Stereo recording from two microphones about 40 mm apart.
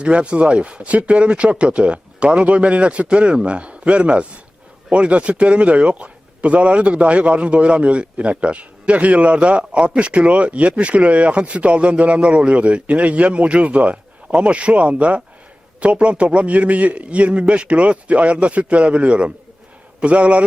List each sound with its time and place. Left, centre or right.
0.0 s speech: right